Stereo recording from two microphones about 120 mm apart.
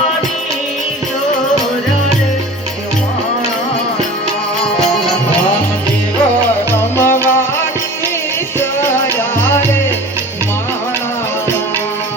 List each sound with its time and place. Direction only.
6.9 s music: 20° left (ahead or behind)